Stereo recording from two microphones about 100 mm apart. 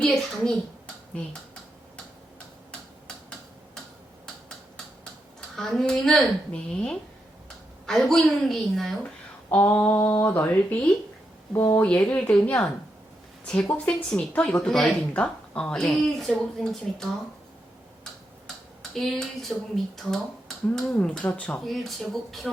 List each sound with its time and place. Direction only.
0.0 s a woman's voice: 5° left (ahead or behind)
5.5 s a woman's voice: 5° left (ahead or behind)
9.6 s speech: 20° left (ahead or behind)
11.5 s speech: 30° left (ahead or behind)
11.8 s a woman's voice: 15° left (ahead or behind)
18.4 s a woman's voice: 5° left (ahead or behind)
21.6 s a woman's voice: centre (ahead or behind)